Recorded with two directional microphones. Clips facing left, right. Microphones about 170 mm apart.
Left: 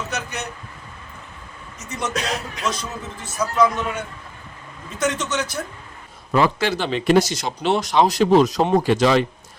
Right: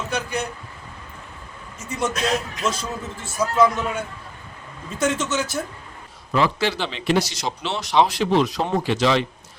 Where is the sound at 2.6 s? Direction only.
30° right (ahead or behind).